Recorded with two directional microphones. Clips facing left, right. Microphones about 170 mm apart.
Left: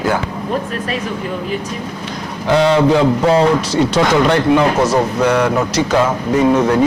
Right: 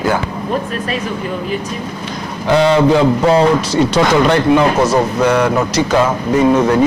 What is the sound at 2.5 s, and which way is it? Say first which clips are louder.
A man's voice: right 1 dB; 15° right (ahead or behind).